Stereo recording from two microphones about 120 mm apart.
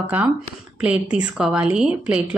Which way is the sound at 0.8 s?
10° right (ahead or behind).